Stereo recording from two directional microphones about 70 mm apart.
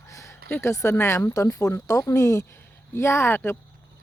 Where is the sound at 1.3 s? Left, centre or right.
Left.